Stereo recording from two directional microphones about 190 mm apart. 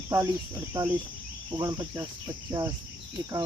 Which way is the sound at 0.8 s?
20° right (ahead or behind).